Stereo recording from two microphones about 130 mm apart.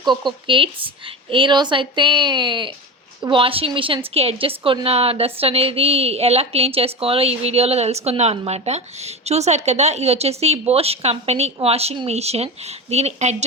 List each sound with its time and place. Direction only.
0.1 s a woman's voice: 40° right (ahead or behind); by 13.3 s 55° right (ahead or behind)